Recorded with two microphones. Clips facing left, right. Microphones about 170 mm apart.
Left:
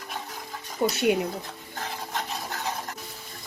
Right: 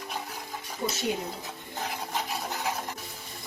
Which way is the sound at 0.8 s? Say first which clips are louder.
Left 7 dB; 75° left (ahead or behind).